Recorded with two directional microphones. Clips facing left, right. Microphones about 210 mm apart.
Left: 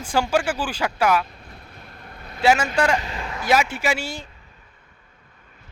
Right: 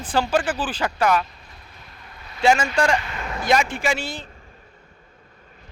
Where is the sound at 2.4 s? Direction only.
5° left (ahead or behind).